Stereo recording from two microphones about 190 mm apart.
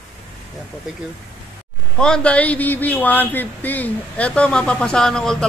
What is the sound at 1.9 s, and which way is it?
A man's voice, 5° left (ahead or behind).